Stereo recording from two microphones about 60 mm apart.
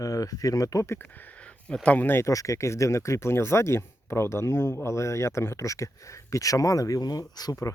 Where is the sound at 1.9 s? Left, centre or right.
Left.